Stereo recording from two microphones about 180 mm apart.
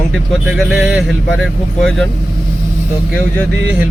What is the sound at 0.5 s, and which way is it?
Speech, centre (ahead or behind).